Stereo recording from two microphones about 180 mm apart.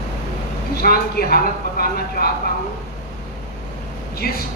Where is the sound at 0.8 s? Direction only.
55° left (ahead or behind).